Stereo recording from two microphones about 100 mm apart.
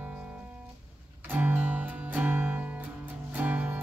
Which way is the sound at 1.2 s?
20° right (ahead or behind).